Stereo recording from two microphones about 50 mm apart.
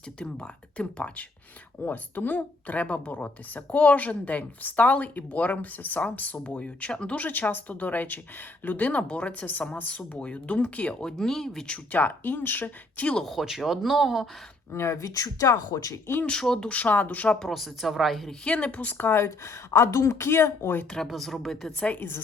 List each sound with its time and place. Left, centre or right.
0.2 s speech: left
1.8 s a woman's voice: left
7.3 s a woman's voice: left
11.0 s speech: centre
11.9 s a woman's voice: left
13.6 s speech: centre
14.7 s speech: left
16.4 s speech: centre
16.6 s a woman's voice: left
17.4 s speech: centre
18.4 s a woman's voice: left
19.1 s speech: left
21.1 s speech: centre